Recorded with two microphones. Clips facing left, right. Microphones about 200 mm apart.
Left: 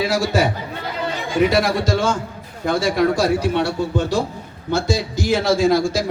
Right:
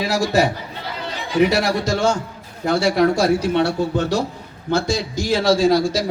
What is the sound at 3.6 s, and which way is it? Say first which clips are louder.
Speech: right 1 dB; 60° right (ahead or behind).